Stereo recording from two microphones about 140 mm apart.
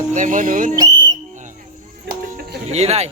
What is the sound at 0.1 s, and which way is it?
Speech, 70° right (ahead or behind).